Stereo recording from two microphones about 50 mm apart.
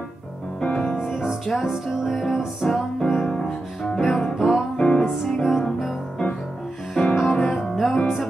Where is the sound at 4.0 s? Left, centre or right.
Centre.